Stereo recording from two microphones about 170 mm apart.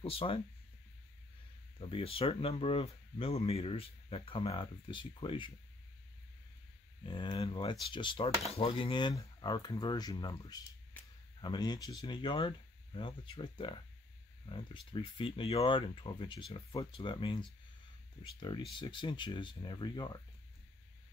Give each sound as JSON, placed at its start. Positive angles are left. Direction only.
{"t": 0.0, "sound": "speech", "side_deg": 35}
{"t": 1.8, "sound": "speech", "side_deg": 35}
{"t": 7.0, "sound": "speech", "side_deg": 25}